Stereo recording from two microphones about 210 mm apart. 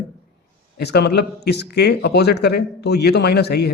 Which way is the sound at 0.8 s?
55° left (ahead or behind).